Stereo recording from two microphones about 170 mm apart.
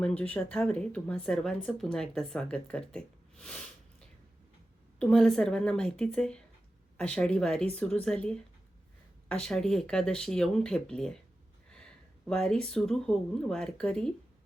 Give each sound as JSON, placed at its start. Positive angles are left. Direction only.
{"t": 0.0, "sound": "speech", "side_deg": 10}
{"t": 4.9, "sound": "speech", "side_deg": 5}
{"t": 12.3, "sound": "speech", "side_deg": 5}